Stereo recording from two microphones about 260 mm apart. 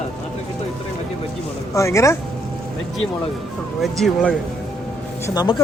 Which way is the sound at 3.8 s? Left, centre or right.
Centre.